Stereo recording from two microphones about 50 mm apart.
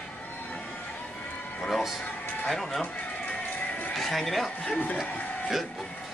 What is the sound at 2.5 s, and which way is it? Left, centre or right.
Speech, centre.